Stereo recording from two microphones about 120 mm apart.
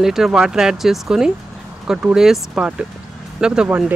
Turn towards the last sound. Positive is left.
turn(degrees=-10)  # may be behind; listen again after turning